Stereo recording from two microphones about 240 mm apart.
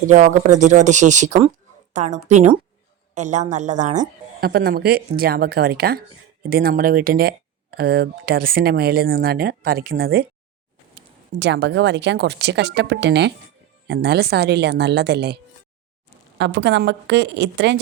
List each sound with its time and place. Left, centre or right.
0.1 s a woman's voice: right
16.4 s speech: right